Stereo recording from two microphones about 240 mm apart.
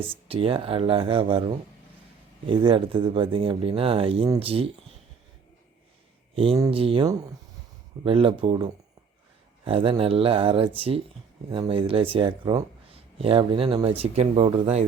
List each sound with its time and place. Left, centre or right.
0.3 s speech: right
6.3 s speech: right